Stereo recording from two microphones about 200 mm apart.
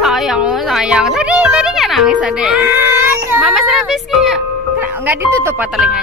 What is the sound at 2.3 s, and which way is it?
A child's voice, 5° right (ahead or behind).